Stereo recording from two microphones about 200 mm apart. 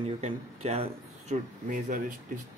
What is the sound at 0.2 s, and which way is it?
Speech, 30° right (ahead or behind).